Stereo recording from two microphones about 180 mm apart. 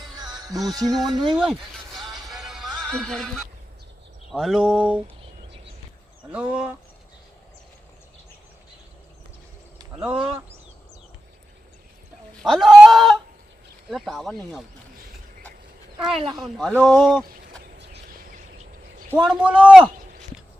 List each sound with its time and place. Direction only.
0.2 s music: 20° right (ahead or behind)
1.4 s a sound: centre (ahead or behind)
2.1 s music: centre (ahead or behind)
4.3 s speech: centre (ahead or behind)
6.3 s speech: 5° right (ahead or behind)
10.0 s speech: 5° right (ahead or behind)
12.4 s speech: centre (ahead or behind)
16.1 s music: 30° right (ahead or behind)
16.4 s speech: centre (ahead or behind)
17.7 s a sound: 70° right (ahead or behind)
19.1 s speech: 5° right (ahead or behind)